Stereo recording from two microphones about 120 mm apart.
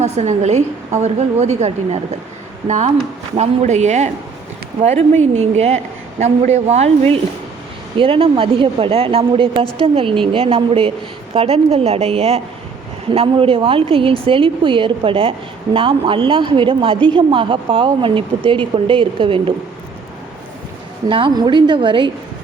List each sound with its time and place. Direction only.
0.0 s a woman's voice: 70° right (ahead or behind)
7.9 s a woman's voice: 50° right (ahead or behind)
21.1 s a woman's voice: 45° right (ahead or behind)